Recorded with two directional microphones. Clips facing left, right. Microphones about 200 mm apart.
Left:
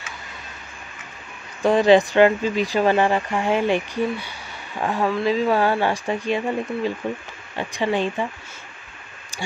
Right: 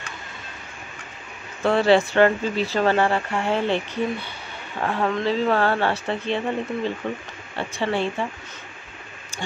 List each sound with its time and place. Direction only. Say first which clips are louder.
1.6 s speech: left 3 dB; 15° left (ahead or behind)